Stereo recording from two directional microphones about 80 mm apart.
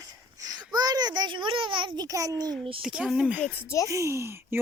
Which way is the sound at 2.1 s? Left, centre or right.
Right.